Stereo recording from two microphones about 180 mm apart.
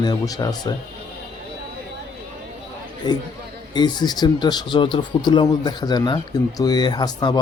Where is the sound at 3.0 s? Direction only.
25° left (ahead or behind).